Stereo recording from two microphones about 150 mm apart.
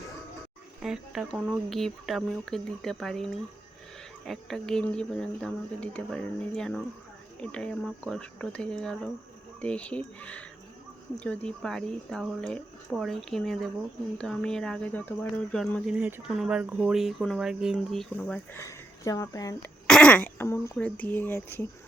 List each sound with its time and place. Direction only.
0.8 s speech: 5° right (ahead or behind)
16.0 s speech: 15° right (ahead or behind); by 18.3 s 5° left (ahead or behind)
18.5 s speech: 20° left (ahead or behind)
19.9 s speech: 5° left (ahead or behind)